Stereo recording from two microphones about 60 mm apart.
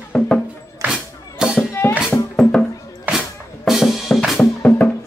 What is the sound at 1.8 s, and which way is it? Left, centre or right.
Music, left.